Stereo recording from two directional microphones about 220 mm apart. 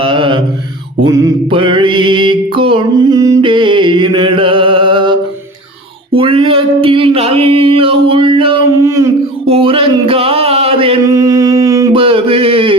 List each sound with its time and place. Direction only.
0.0 s mantra: 25° right (ahead or behind)
8.8 s a sound: 15° right (ahead or behind)
9.5 s chant: 25° right (ahead or behind)